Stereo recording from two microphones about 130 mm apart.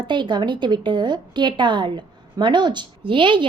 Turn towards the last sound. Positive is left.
turn(degrees=-40)  # may be behind; listen again after turning